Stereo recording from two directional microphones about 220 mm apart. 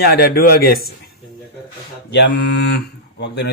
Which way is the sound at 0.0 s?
45° left (ahead or behind).